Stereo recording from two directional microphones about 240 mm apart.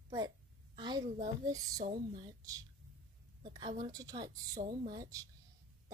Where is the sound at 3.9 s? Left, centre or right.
Centre.